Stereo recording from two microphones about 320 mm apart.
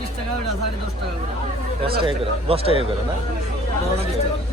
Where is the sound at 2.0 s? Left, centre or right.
Centre.